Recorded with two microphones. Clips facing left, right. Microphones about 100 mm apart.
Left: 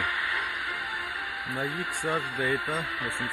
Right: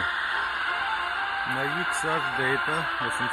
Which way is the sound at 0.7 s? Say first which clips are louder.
Right 6 dB; 55° right (ahead or behind).